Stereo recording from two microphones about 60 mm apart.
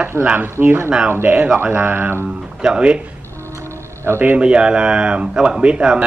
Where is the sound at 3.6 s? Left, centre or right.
Right.